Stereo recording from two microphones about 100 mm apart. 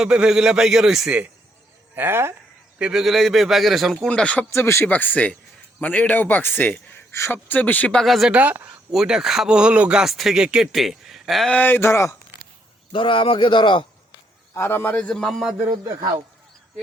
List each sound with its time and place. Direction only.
0.0 s speech: 10° right (ahead or behind)
2.0 s speech: 25° right (ahead or behind)
2.7 s a man's voice: 10° right (ahead or behind)
4.1 s a man's voice: 10° left (ahead or behind)
4.5 s a man's voice: 25° left (ahead or behind)
8.0 s a man's voice: centre (ahead or behind)
8.3 s speech: 15° right (ahead or behind)
8.9 s speech: 5° right (ahead or behind)
11.5 s speech: 20° left (ahead or behind)
12.9 s speech: 60° left (ahead or behind)
14.5 s a man's voice: 25° left (ahead or behind); by 15.4 s 5° left (ahead or behind)